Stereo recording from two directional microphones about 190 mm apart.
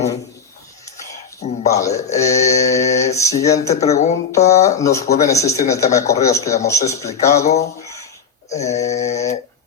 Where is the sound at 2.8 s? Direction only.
35° left (ahead or behind).